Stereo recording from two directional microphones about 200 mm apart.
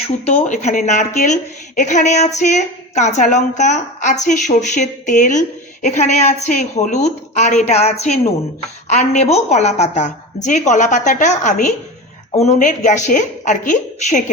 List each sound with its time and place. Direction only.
0.3 s a woman's voice: 35° left (ahead or behind)